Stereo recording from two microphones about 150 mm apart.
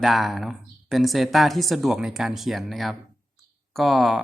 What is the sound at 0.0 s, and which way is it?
Speech, centre (ahead or behind).